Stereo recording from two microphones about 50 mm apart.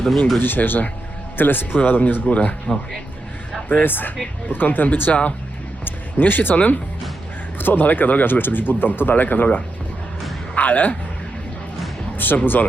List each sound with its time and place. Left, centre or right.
0.3 s speech: left
3.7 s speech: left
5.8 s music: left
7.6 s speech: left
12.1 s speech: left